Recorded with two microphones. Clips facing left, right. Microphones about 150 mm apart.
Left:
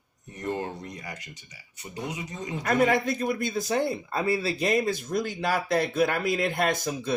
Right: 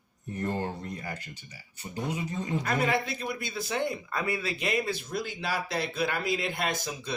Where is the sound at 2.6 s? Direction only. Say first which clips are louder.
Left 7 dB; 50° left (ahead or behind).